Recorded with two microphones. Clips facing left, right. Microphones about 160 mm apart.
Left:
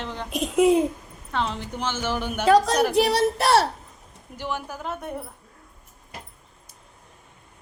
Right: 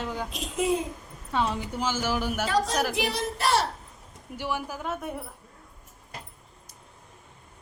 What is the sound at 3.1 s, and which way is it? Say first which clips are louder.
Speech: left 6 dB; 70° left (ahead or behind).